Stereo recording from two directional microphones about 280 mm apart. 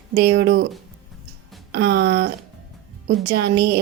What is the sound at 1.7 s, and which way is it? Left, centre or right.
Speech, right.